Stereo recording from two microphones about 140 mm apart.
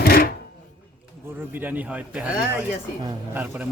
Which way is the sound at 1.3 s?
15° right (ahead or behind).